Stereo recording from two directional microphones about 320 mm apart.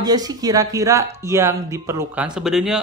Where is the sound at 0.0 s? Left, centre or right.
Centre.